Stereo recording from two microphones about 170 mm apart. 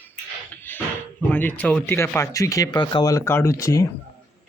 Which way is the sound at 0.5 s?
10° left (ahead or behind).